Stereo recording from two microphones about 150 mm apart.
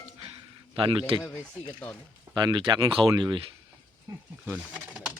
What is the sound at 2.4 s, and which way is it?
Speech, 30° right (ahead or behind).